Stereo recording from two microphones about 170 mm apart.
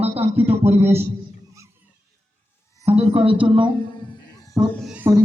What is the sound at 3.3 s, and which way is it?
Speech, 30° right (ahead or behind).